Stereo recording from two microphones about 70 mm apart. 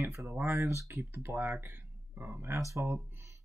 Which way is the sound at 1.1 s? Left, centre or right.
Right.